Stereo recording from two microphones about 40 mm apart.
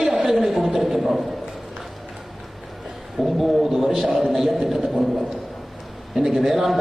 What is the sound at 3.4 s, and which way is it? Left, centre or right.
A man's voice, centre.